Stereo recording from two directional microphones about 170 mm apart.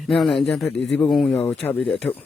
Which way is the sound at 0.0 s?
Centre (ahead or behind).